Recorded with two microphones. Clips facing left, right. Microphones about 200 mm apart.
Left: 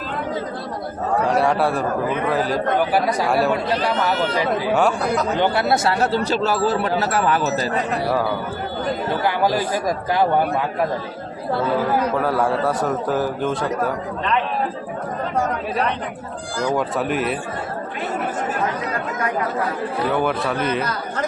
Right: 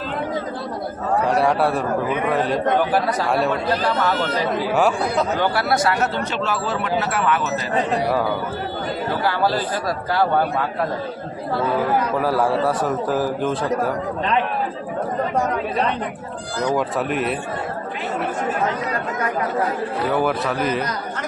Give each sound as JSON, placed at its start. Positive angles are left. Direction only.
{"t": 1.3, "sound": "a man's voice", "side_deg": 0}
{"t": 4.7, "sound": "a man's voice", "side_deg": 0}
{"t": 5.4, "sound": "speech", "side_deg": 20}
{"t": 9.2, "sound": "speech", "side_deg": 15}
{"t": 12.2, "sound": "a man's voice", "side_deg": 0}
{"t": 16.7, "sound": "a man's voice", "side_deg": 0}
{"t": 20.1, "sound": "a man's voice", "side_deg": 0}